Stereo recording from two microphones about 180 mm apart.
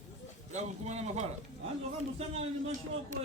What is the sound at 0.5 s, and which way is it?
A man's voice, 40° right (ahead or behind).